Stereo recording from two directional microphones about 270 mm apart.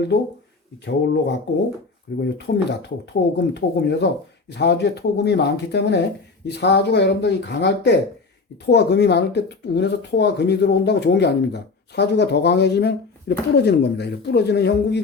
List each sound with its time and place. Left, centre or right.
0.9 s speech: left